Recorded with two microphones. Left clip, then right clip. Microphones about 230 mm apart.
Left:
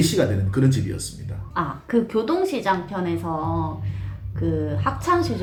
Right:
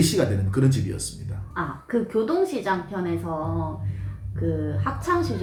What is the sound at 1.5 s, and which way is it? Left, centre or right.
A woman's voice, left.